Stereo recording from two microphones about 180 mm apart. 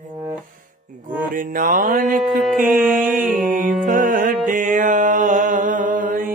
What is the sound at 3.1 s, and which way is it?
Mantra, 5° right (ahead or behind).